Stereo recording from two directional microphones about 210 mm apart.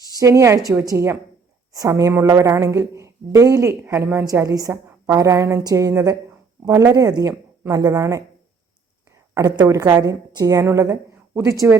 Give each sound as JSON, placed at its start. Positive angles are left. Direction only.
{"t": 0.2, "sound": "a woman's voice", "side_deg": -15}
{"t": 9.3, "sound": "a woman's voice", "side_deg": -15}